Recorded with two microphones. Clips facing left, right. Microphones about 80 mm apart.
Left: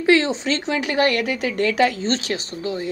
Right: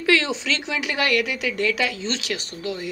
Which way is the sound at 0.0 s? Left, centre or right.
Left.